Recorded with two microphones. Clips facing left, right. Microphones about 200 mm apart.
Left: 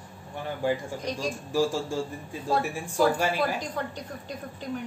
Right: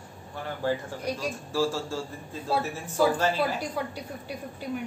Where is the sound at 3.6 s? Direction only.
10° right (ahead or behind).